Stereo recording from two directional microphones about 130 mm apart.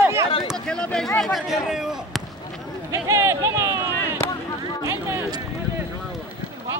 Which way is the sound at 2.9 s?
20° right (ahead or behind).